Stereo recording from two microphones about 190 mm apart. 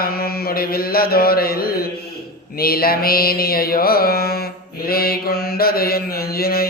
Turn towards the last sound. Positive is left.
turn(degrees=50)  # may be behind; listen again after turning